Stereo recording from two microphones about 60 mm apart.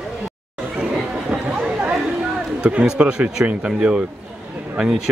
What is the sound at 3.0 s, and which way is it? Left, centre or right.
Speech, centre.